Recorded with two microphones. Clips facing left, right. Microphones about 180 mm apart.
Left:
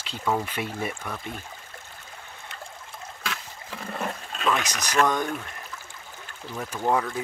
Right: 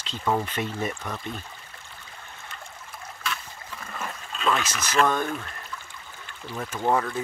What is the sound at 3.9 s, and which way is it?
Toilet flush, 35° left (ahead or behind).